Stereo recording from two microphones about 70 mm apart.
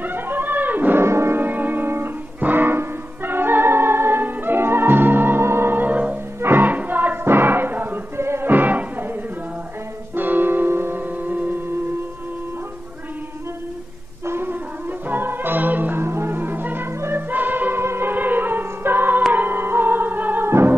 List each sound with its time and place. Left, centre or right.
0.0 s a sound: right
1.0 s music: right
10.1 s music: right
14.2 s music: right
20.4 s music: right